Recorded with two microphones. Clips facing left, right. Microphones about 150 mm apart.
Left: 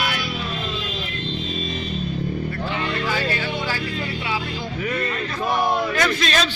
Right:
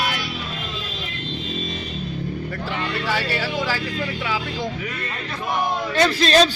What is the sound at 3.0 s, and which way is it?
Music, 80° right.